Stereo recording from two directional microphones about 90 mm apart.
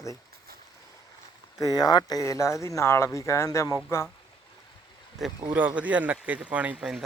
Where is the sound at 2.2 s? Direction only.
35° left (ahead or behind).